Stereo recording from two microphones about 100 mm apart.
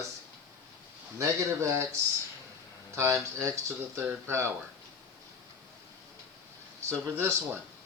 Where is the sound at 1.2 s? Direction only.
30° right (ahead or behind).